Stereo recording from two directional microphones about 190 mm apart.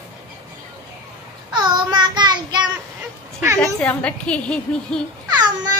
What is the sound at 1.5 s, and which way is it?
Child singing, 25° right (ahead or behind).